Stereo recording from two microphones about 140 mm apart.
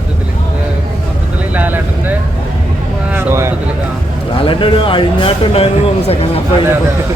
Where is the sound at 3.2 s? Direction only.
20° right (ahead or behind).